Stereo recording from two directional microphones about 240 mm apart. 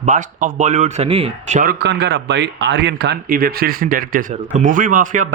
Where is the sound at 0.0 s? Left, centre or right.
Right.